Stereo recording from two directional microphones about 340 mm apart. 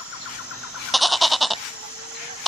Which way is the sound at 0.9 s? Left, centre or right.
Centre.